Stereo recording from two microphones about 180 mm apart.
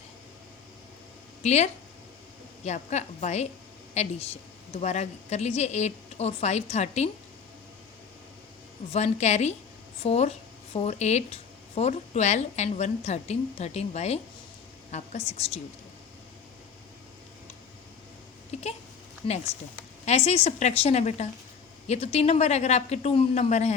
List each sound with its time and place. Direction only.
1.4 s speech: 40° left (ahead or behind)
8.9 s a woman's voice: 35° left (ahead or behind)
20.1 s speech: 35° left (ahead or behind)